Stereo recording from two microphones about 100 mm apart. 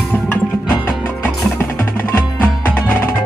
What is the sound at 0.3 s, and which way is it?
Music, 20° left (ahead or behind).